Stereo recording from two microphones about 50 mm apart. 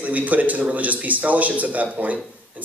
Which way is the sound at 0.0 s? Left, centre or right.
Right.